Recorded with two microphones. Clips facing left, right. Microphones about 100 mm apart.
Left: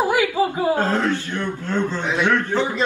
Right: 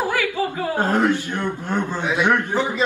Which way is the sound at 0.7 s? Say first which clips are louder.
Right 2 dB; 15° right (ahead or behind).